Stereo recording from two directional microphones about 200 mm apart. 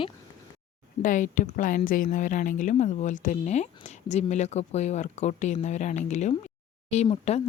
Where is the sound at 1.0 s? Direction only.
40° left (ahead or behind).